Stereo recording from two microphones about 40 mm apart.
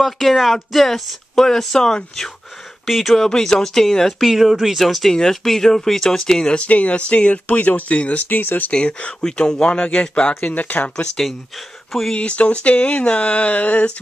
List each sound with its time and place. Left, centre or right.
0.0 s speech: centre
1.3 s speech: centre
2.9 s speech: centre
3.3 s speech: centre
4.3 s speech: centre
5.1 s speech: centre
6.6 s speech: left
8.7 s speech: left
10.5 s speech: left
12.1 s speech: left